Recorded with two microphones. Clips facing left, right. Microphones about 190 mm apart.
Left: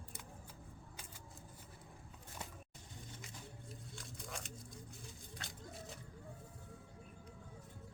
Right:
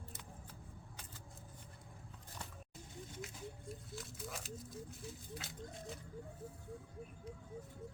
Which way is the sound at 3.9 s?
5° right (ahead or behind).